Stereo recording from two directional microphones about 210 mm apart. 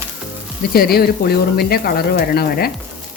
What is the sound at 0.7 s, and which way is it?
Speech, 45° left (ahead or behind).